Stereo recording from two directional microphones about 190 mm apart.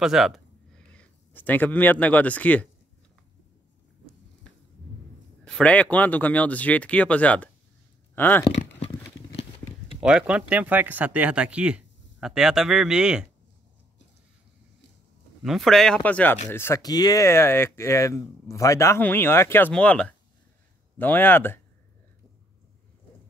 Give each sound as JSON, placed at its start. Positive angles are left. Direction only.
{"t": 0.0, "sound": "speech", "side_deg": 0}
{"t": 5.4, "sound": "speech", "side_deg": 5}
{"t": 8.5, "sound": "a sound", "side_deg": 35}
{"t": 9.9, "sound": "speech", "side_deg": -5}
{"t": 15.4, "sound": "speech", "side_deg": 0}